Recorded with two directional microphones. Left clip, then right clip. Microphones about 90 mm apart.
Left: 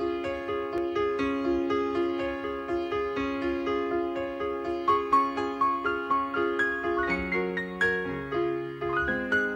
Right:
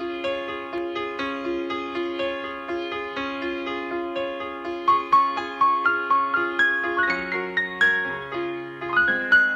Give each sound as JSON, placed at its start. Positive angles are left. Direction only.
{"t": 0.7, "sound": "music", "side_deg": 40}
{"t": 4.8, "sound": "music", "side_deg": 40}